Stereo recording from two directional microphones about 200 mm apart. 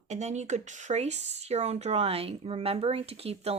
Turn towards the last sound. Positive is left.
turn(degrees=-30)  # may be behind; listen again after turning